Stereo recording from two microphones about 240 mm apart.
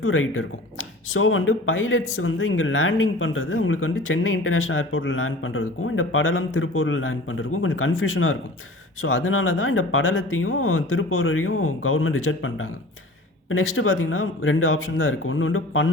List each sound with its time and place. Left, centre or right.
0.0 s speech: left